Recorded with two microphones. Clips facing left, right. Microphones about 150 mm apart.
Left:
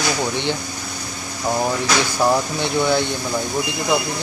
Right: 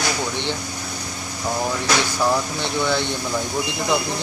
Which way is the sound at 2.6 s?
10° left (ahead or behind).